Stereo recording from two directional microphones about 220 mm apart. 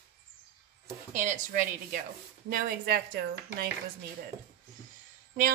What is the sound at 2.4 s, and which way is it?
A woman's voice, 40° right (ahead or behind).